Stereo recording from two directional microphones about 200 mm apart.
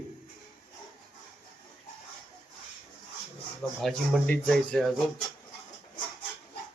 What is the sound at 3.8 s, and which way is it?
Speech, centre (ahead or behind).